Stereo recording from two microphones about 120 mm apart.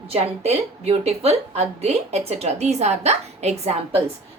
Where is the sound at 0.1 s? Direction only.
55° right (ahead or behind).